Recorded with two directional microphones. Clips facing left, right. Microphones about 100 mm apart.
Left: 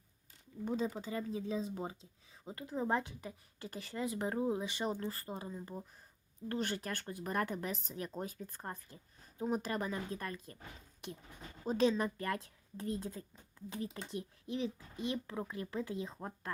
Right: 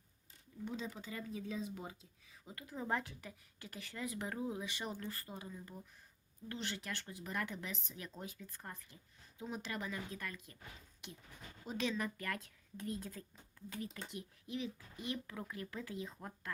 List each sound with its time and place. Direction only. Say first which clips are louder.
0.6 s speech: left 7 dB; 40° left (ahead or behind)
6.5 s speech: left 6 dB; 45° left (ahead or behind)
11.6 s speech: left 8 dB; 35° left (ahead or behind)